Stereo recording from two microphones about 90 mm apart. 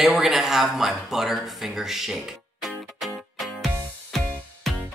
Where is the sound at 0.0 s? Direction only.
5° right (ahead or behind).